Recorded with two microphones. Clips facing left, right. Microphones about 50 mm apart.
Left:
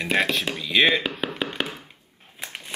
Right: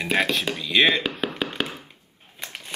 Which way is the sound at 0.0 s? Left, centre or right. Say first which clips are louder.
Even; centre.